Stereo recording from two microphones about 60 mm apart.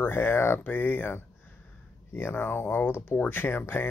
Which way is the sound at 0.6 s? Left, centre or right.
Left.